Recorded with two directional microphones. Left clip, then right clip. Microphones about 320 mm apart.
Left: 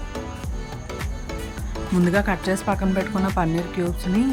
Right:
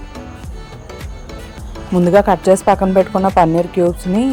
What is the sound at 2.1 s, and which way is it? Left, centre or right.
Speech, right.